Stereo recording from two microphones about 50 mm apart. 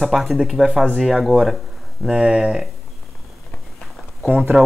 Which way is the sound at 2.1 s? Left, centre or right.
Centre.